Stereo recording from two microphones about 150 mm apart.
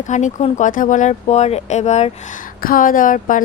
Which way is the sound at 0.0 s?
55° left (ahead or behind).